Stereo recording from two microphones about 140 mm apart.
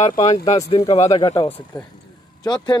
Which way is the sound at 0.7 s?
45° left (ahead or behind).